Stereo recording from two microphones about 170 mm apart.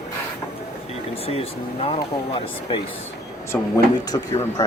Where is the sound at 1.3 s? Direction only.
35° left (ahead or behind).